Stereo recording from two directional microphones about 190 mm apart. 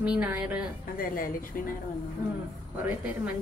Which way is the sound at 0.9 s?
50° left (ahead or behind).